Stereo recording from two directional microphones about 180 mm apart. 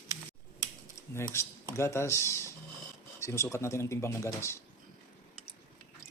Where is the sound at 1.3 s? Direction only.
15° left (ahead or behind).